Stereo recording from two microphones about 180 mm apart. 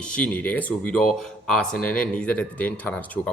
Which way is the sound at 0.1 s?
5° left (ahead or behind).